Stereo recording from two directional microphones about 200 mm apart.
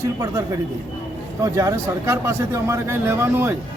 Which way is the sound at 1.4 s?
15° right (ahead or behind).